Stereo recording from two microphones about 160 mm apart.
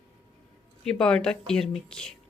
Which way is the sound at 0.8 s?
5° left (ahead or behind).